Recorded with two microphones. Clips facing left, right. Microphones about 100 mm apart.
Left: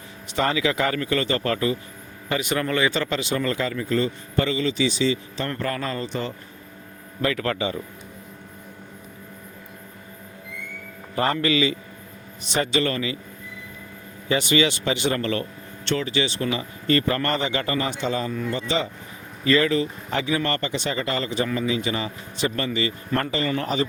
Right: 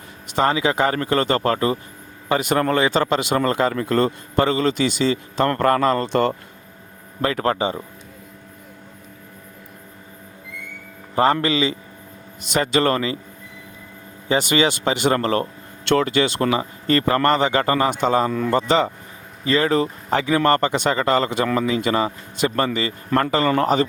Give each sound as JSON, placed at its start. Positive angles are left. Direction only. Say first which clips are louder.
{"t": 0.3, "sound": "speech", "louder": "right 4 dB", "side_deg": -35}
{"t": 7.2, "sound": "speech", "louder": "right 4 dB", "side_deg": -35}
{"t": 11.1, "sound": "a man's voice", "louder": "right 4 dB", "side_deg": -30}
{"t": 12.5, "sound": "speech", "louder": "right 4 dB", "side_deg": -45}
{"t": 14.3, "sound": "speech", "louder": "right 2 dB", "side_deg": -35}
{"t": 16.0, "sound": "speech", "louder": "right 6 dB", "side_deg": -50}
{"t": 16.6, "sound": "speech", "louder": "right 2 dB", "side_deg": -40}
{"t": 19.5, "sound": "speech", "louder": "right 2 dB", "side_deg": -35}